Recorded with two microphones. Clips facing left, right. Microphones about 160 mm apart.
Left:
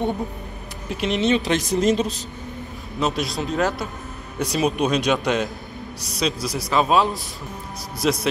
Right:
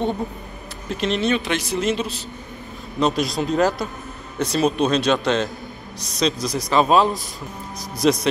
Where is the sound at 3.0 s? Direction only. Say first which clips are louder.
Right 3 dB; centre (ahead or behind).